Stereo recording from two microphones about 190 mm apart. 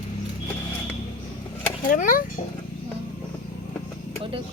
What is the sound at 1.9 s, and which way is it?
Speech, 45° left (ahead or behind).